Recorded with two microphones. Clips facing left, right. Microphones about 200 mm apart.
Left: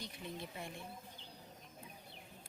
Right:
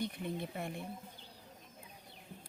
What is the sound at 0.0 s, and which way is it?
Speech, 55° right (ahead or behind).